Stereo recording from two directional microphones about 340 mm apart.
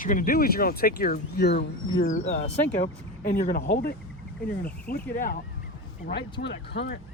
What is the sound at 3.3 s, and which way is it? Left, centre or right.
Speech, left.